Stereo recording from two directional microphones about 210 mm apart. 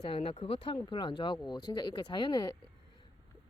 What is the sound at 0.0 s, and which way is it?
Speech, 25° left (ahead or behind).